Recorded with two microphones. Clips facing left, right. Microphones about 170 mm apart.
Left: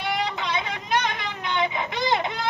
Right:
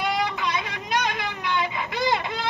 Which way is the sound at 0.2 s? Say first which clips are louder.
Right 1 dB; 25° left (ahead or behind).